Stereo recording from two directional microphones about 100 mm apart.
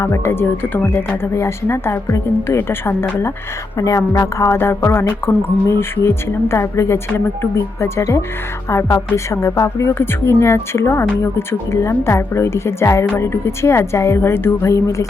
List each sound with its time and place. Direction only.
0.0 s a woman's voice: 25° left (ahead or behind)